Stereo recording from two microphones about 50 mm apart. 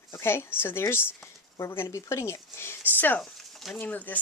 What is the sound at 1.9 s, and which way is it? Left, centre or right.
Speech, left.